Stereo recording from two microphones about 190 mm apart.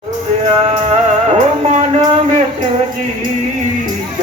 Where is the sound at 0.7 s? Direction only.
35° right (ahead or behind).